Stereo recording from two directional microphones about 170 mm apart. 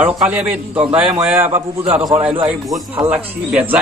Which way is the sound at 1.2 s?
15° right (ahead or behind).